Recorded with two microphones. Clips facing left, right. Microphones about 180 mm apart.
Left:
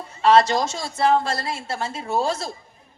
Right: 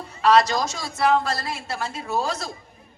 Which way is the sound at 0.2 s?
25° left (ahead or behind).